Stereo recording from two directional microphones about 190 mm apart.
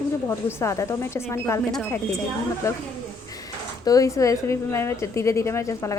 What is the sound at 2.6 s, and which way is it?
Speech, 15° left (ahead or behind).